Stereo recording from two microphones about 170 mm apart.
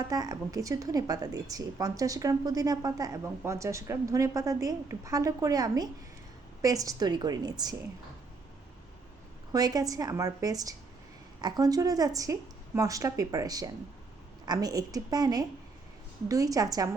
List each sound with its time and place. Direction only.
0.0 s a woman's voice: 20° right (ahead or behind)
9.5 s a woman's voice: 20° right (ahead or behind)